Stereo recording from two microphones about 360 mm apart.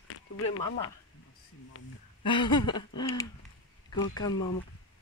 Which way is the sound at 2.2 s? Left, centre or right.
Centre.